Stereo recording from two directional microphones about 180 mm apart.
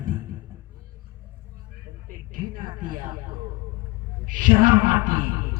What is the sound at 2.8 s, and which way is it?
Speech, 50° right (ahead or behind).